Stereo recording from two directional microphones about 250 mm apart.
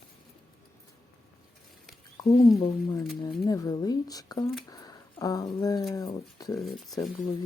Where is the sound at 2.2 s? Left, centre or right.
Centre.